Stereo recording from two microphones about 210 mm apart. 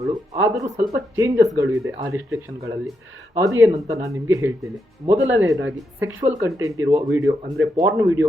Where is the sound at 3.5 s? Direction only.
15° right (ahead or behind).